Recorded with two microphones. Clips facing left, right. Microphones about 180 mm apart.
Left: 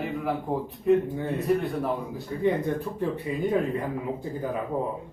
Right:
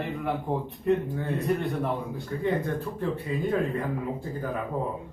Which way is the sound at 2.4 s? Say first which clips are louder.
Left 3 dB; 15° left (ahead or behind).